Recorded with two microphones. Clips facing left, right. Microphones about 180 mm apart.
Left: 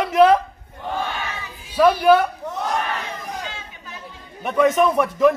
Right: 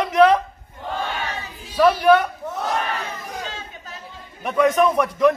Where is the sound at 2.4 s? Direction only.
5° right (ahead or behind).